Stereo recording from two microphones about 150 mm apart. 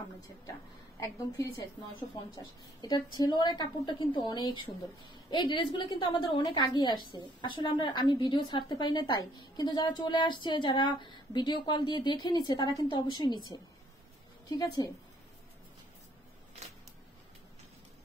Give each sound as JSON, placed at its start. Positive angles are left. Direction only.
{"t": 0.9, "sound": "a woman's voice", "side_deg": 20}
{"t": 14.5, "sound": "a woman's voice", "side_deg": 25}